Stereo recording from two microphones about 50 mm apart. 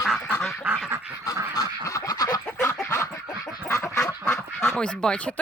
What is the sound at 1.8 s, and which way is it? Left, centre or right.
Quack, left.